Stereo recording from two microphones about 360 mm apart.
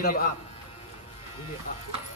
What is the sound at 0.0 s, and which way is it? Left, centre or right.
Speech, left.